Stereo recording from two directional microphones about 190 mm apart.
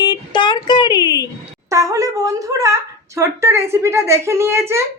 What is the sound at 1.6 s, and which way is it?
Speech, 15° right (ahead or behind).